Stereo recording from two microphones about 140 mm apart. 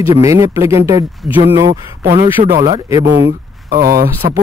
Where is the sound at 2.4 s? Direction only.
50° right (ahead or behind).